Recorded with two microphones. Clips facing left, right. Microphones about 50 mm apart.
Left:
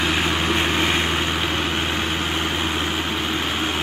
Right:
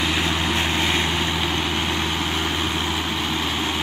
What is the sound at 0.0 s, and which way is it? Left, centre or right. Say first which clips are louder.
Vehicle: left 1 dB; centre.